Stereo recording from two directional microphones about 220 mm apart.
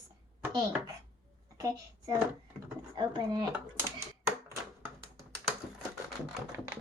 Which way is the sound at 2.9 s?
20° right (ahead or behind).